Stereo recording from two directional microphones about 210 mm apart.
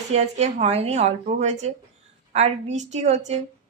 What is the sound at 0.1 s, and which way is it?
Speech, 30° right (ahead or behind).